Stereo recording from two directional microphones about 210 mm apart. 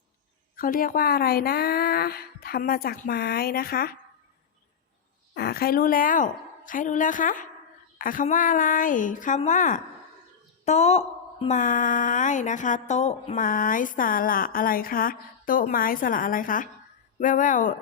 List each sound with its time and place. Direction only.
0.5 s speech: 40° left (ahead or behind)
5.3 s a woman's voice: 45° left (ahead or behind)